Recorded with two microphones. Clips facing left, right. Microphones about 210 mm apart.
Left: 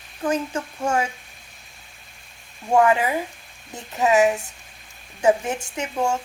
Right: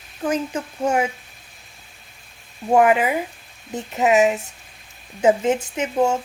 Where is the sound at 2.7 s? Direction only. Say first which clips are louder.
Right 2 dB; 20° right (ahead or behind).